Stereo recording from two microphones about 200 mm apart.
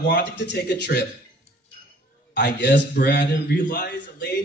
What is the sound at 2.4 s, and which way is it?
A man's voice, 60° left (ahead or behind).